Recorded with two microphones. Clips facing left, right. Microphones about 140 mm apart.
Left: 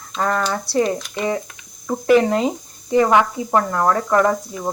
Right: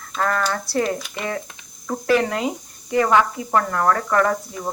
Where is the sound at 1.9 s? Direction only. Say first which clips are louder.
Left 5 dB; 20° left (ahead or behind).